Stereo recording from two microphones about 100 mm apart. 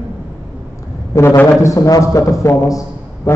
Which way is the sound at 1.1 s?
35° left (ahead or behind).